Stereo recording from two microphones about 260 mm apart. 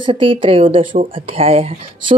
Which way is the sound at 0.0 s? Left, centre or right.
Centre.